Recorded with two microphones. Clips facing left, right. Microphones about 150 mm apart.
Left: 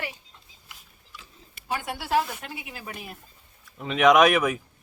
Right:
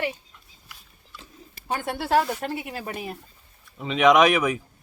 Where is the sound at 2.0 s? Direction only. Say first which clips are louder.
Right 4 dB; 55° right (ahead or behind).